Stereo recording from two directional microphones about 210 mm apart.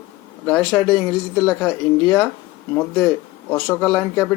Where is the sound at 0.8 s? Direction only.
20° left (ahead or behind).